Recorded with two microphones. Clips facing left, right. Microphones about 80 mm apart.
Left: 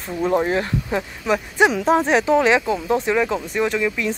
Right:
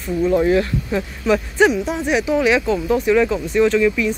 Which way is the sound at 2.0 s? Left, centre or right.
Left.